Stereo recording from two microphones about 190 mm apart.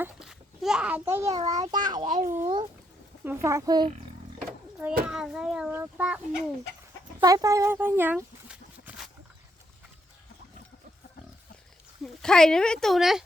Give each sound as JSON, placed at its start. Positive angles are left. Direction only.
{"t": 0.0, "sound": "a child's voice", "side_deg": -5}
{"t": 2.0, "sound": "a child's voice", "side_deg": -40}
{"t": 2.2, "sound": "a child's voice", "side_deg": -15}
{"t": 5.0, "sound": "a child's voice", "side_deg": -5}
{"t": 7.2, "sound": "speech", "side_deg": -20}
{"t": 12.0, "sound": "a child's voice", "side_deg": 5}